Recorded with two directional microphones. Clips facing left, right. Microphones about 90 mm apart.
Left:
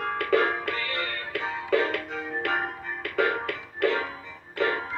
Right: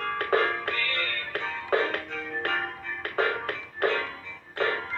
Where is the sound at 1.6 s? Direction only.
40° right (ahead or behind).